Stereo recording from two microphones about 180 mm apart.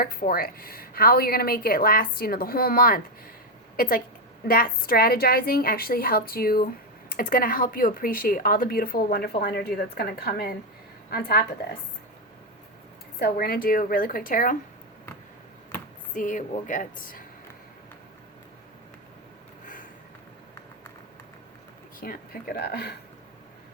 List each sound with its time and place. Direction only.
0.0 s a woman's voice: 55° left (ahead or behind)
13.1 s speech: 60° left (ahead or behind)
16.1 s speech: 45° left (ahead or behind)
19.6 s a sound: 45° left (ahead or behind)
22.0 s a woman's voice: 55° left (ahead or behind)